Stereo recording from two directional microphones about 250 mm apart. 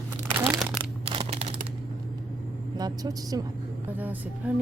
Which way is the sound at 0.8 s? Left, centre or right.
Right.